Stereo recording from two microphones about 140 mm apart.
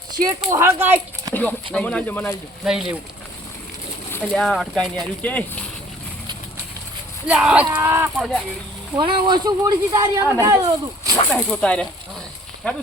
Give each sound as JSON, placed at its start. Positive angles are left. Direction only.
{"t": 0.3, "sound": "speech", "side_deg": -20}
{"t": 1.3, "sound": "a sound", "side_deg": 10}
{"t": 1.7, "sound": "speech", "side_deg": 10}
{"t": 2.6, "sound": "speech", "side_deg": 0}
{"t": 4.1, "sound": "speech", "side_deg": 10}
{"t": 7.3, "sound": "speech", "side_deg": -5}
{"t": 8.2, "sound": "speech", "side_deg": 0}
{"t": 9.0, "sound": "speech", "side_deg": -35}
{"t": 11.3, "sound": "speech", "side_deg": 10}